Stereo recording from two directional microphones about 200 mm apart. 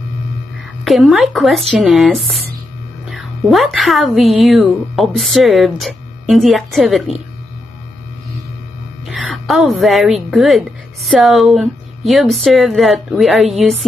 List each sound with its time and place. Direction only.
0.8 s speech: centre (ahead or behind)
9.0 s a woman's voice: centre (ahead or behind)